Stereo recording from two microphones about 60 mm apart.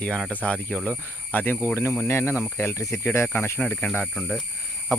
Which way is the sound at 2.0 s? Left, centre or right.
Left.